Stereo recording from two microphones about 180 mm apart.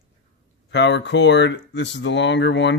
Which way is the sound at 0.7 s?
75° left (ahead or behind).